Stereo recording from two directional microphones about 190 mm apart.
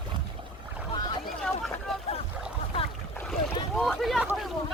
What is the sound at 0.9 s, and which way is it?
Boat, 20° left (ahead or behind).